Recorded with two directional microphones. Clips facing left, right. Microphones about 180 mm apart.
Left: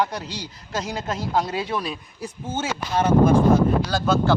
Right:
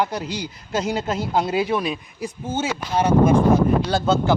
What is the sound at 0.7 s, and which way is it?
Speech, 25° right (ahead or behind).